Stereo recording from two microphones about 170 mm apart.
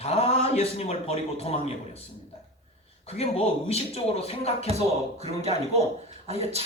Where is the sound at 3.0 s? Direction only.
35° left (ahead or behind).